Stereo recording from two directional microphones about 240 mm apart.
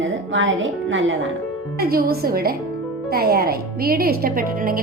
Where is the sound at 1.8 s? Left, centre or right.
Right.